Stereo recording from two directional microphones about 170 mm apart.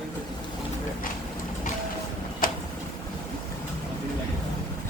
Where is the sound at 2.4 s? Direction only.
55° left (ahead or behind).